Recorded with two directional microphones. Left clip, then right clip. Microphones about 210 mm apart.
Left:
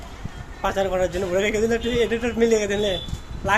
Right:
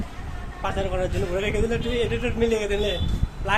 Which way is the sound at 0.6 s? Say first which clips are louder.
Left 5 dB; 35° left (ahead or behind).